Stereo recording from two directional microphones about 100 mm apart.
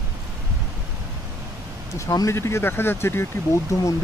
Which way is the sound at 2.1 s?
30° left (ahead or behind).